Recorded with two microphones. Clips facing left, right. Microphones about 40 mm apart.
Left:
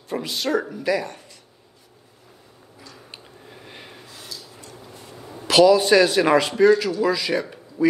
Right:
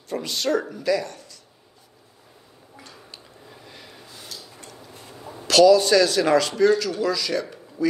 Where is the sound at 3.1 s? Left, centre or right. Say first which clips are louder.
Left 2 dB; left.